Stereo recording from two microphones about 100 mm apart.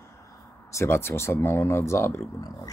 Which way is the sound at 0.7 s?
25° left (ahead or behind).